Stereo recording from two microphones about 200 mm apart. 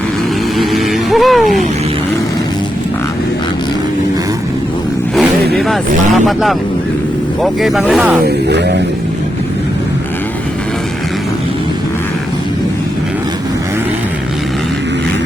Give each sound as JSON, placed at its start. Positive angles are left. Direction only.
{"t": 0.6, "sound": "vehicle", "side_deg": 0}
{"t": 5.5, "sound": "speech", "side_deg": 0}
{"t": 8.4, "sound": "music", "side_deg": -55}